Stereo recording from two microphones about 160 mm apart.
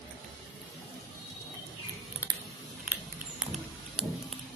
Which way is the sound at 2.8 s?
10° right (ahead or behind).